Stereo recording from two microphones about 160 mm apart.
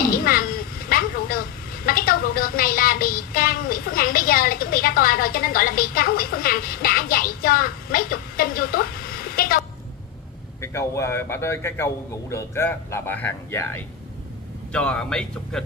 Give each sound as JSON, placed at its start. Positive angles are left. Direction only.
{"t": 0.0, "sound": "a sound", "side_deg": 65}
{"t": 1.9, "sound": "speech", "side_deg": 65}
{"t": 10.6, "sound": "a man's voice", "side_deg": 20}
{"t": 14.7, "sound": "a man's voice", "side_deg": 5}